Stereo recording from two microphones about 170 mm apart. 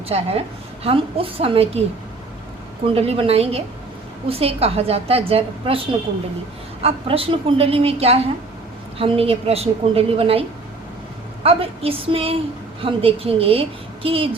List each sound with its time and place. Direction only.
0.1 s a woman's voice: 35° right (ahead or behind)
2.8 s a woman's voice: 35° right (ahead or behind)
11.4 s a woman's voice: 35° right (ahead or behind)